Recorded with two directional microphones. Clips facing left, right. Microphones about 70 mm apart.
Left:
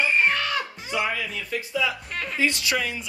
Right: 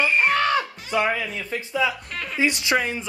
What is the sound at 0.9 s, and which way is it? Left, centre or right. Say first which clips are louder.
Speech: right 4 dB; right.